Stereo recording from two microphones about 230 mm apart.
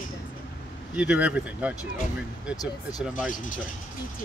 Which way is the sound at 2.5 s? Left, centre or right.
Centre.